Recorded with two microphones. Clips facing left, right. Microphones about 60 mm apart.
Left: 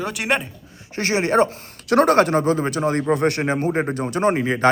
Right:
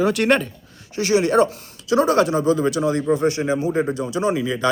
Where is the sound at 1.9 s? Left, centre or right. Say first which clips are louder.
Left 2 dB; left.